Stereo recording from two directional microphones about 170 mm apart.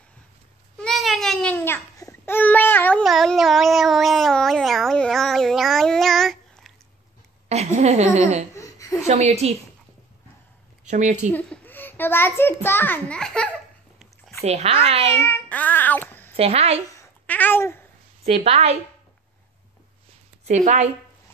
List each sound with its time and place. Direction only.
0.7 s babbling: centre (ahead or behind)
7.4 s a woman's voice: 40° right (ahead or behind)
8.5 s a sound: 20° left (ahead or behind)
9.0 s speech: 40° right (ahead or behind)
10.9 s a woman's voice: 45° right (ahead or behind)
11.3 s a child's voice: 5° left (ahead or behind)
14.4 s speech: 40° right (ahead or behind)
15.2 s child singing: 10° left (ahead or behind)
16.3 s speech: 35° right (ahead or behind)
17.3 s babbling: 10° left (ahead or behind)
18.2 s speech: 35° right (ahead or behind)
20.4 s a woman's voice: 45° right (ahead or behind)